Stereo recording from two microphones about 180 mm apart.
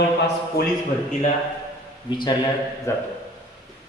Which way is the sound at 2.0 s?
25° left (ahead or behind).